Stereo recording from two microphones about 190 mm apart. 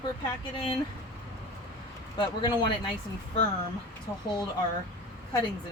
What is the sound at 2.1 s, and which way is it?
Speech, 25° left (ahead or behind).